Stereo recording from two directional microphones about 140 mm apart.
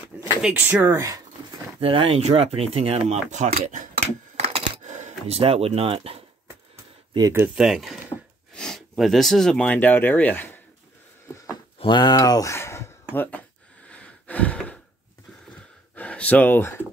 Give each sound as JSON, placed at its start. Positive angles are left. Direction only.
{"t": 0.4, "sound": "speech", "side_deg": -10}
{"t": 1.8, "sound": "speech", "side_deg": -40}
{"t": 4.4, "sound": "coin", "side_deg": -45}
{"t": 5.4, "sound": "speech", "side_deg": -45}
{"t": 7.2, "sound": "speech", "side_deg": -20}
{"t": 7.5, "sound": "speech", "side_deg": -5}
{"t": 11.8, "sound": "speech", "side_deg": 30}
{"t": 13.8, "sound": "a sound", "side_deg": 10}
{"t": 16.0, "sound": "speech", "side_deg": 10}